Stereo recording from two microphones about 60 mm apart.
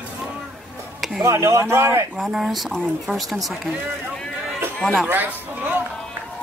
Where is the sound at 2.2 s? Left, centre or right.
Centre.